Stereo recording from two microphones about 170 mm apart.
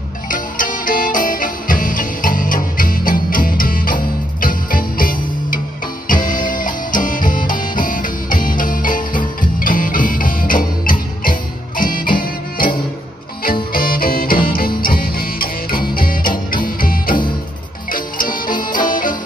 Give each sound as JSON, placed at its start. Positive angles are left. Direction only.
{"t": 0.3, "sound": "music", "side_deg": 50}